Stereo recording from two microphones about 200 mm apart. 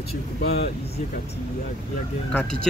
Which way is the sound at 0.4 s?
55° left (ahead or behind).